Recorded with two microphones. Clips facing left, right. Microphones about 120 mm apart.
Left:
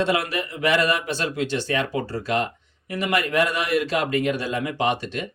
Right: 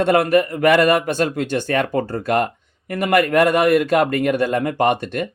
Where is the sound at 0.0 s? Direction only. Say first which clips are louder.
Right 8 dB; 50° right (ahead or behind).